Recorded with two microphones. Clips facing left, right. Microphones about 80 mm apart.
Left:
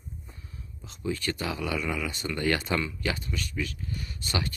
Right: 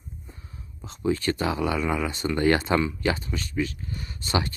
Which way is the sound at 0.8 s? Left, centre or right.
Right.